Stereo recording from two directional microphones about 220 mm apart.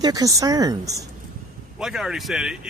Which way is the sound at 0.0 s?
15° right (ahead or behind).